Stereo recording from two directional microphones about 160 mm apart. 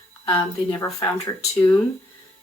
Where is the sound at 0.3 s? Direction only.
15° left (ahead or behind).